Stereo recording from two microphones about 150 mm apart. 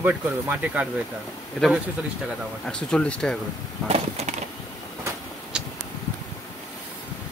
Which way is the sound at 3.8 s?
45° right (ahead or behind).